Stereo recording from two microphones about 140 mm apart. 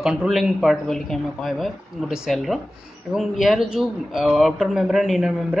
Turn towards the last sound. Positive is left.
turn(degrees=0)  # may be behind; listen again after turning